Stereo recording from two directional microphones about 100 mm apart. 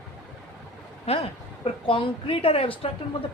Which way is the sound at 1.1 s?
90° left.